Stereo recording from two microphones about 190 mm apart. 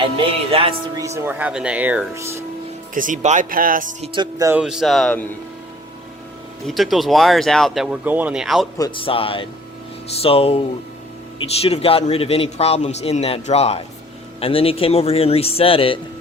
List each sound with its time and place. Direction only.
0.5 s speech: 30° right (ahead or behind)
0.9 s speech: 15° right (ahead or behind)
2.9 s speech: 45° right (ahead or behind)
4.0 s speech: 25° right (ahead or behind)
4.5 s speech: 5° right (ahead or behind)
6.7 s speech: centre (ahead or behind)
8.8 s a man's voice: 30° left (ahead or behind)